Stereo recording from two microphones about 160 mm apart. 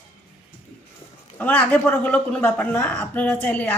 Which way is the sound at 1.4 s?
10° left (ahead or behind).